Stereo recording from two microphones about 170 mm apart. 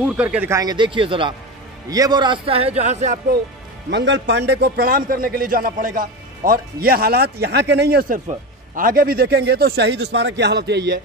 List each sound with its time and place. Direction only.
0.0 s a man's voice: 5° right (ahead or behind); by 3.2 s 40° right (ahead or behind)
3.9 s a man's voice: 90° right; by 8.2 s 65° right (ahead or behind)
8.7 s a man's voice: 55° right (ahead or behind); by 11.0 s 85° right